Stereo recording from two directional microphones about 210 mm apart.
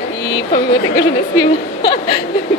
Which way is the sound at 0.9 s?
20° left (ahead or behind).